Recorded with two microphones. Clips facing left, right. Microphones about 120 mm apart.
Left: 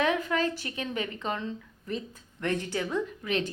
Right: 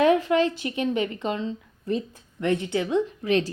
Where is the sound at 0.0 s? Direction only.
35° right (ahead or behind).